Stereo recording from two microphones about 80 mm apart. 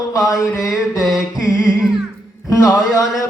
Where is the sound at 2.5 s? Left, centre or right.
Left.